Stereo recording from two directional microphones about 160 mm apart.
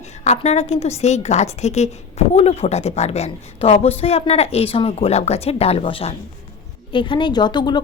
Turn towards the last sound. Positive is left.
turn(degrees=30)  # may be behind; listen again after turning